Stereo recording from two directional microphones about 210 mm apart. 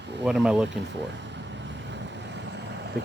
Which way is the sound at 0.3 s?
Centre (ahead or behind).